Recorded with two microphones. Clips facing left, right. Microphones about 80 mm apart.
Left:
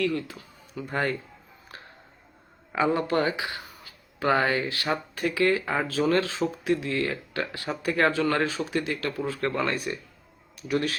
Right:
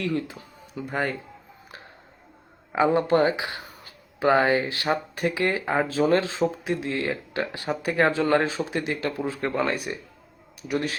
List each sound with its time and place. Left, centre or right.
0.0 s speech: right
2.7 s speech: right